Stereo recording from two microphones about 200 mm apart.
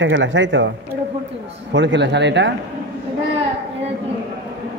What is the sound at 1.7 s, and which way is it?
Speech, 65° right (ahead or behind).